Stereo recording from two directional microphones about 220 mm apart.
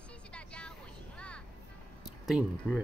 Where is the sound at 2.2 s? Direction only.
5° right (ahead or behind).